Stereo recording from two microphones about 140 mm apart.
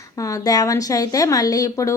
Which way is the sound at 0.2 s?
25° left (ahead or behind).